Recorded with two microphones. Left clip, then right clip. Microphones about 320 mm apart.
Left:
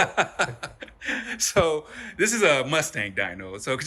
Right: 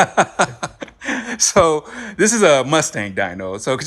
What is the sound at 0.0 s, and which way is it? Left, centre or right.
Speech, right.